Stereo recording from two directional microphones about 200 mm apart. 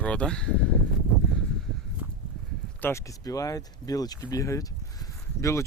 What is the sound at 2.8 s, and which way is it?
Speech, 15° left (ahead or behind).